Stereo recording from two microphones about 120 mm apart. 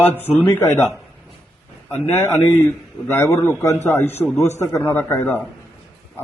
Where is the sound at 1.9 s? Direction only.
20° left (ahead or behind).